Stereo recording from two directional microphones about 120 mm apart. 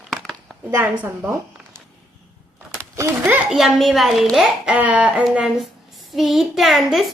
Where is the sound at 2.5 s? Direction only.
25° right (ahead or behind).